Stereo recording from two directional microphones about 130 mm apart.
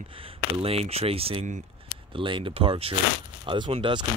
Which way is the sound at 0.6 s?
50° right (ahead or behind).